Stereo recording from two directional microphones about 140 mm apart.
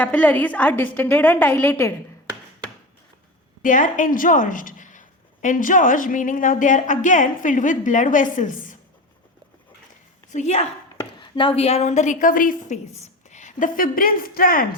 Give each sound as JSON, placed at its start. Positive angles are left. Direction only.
{"t": 0.0, "sound": "a woman's voice", "side_deg": 10}
{"t": 3.6, "sound": "a woman's voice", "side_deg": 70}
{"t": 10.3, "sound": "speech", "side_deg": 50}
{"t": 11.2, "sound": "a woman's voice", "side_deg": 35}